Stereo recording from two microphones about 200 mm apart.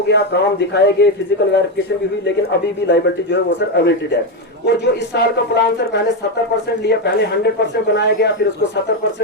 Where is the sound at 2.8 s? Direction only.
60° left (ahead or behind).